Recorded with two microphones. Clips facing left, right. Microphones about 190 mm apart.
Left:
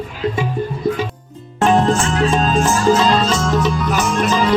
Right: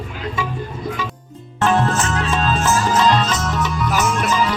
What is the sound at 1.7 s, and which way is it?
Music, 30° left (ahead or behind).